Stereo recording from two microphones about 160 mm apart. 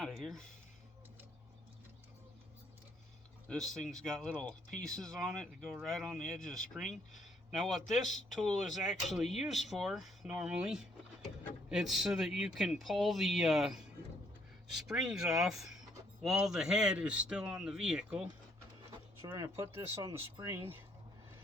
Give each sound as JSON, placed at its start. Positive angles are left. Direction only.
{"t": 0.0, "sound": "speech", "side_deg": 0}
{"t": 3.8, "sound": "speech", "side_deg": 0}
{"t": 14.8, "sound": "speech", "side_deg": -5}
{"t": 19.2, "sound": "speech", "side_deg": -20}